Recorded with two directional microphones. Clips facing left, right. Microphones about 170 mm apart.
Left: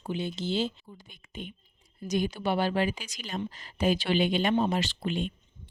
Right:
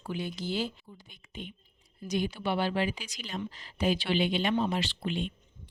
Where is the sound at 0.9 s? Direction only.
50° left (ahead or behind).